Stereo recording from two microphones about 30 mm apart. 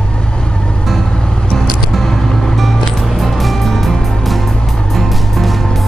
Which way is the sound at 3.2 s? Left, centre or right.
Centre.